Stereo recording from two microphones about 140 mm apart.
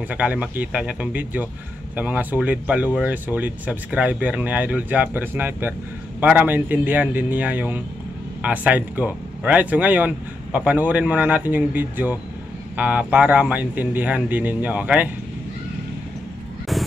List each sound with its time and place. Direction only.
0.1 s speech: 10° right (ahead or behind)